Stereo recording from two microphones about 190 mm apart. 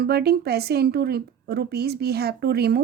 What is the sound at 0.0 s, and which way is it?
A woman's voice, 55° right (ahead or behind).